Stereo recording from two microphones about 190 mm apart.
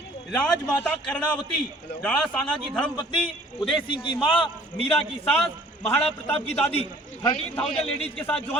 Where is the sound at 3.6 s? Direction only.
25° left (ahead or behind).